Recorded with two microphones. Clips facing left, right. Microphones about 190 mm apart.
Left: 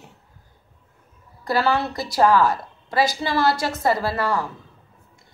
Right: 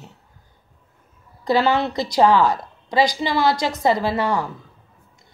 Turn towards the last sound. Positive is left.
turn(degrees=-20)  # may be behind; listen again after turning